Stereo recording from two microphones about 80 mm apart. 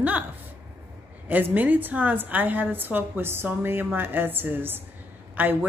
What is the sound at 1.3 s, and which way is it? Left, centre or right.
A woman's voice, right.